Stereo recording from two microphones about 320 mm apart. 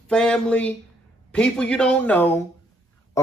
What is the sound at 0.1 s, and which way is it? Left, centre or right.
Speech, centre.